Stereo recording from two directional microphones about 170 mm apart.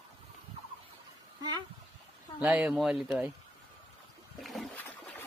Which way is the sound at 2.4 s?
5° right (ahead or behind).